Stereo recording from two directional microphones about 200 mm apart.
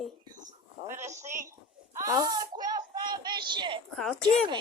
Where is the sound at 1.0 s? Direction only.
35° right (ahead or behind).